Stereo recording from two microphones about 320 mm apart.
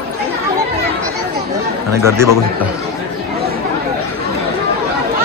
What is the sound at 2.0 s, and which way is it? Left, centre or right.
Speech, centre.